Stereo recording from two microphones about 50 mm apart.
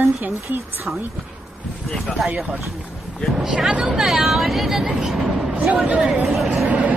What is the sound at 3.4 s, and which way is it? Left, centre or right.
Speech, centre.